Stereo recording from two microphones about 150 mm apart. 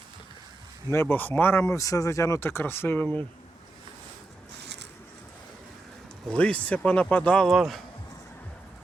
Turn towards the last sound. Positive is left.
turn(degrees=0)  # may be behind; listen again after turning